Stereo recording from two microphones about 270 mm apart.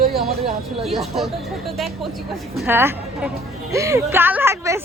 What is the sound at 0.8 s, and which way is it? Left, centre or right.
A woman's voice, centre.